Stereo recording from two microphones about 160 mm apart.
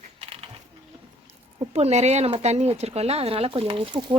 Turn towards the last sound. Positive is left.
turn(degrees=-30)  # may be behind; listen again after turning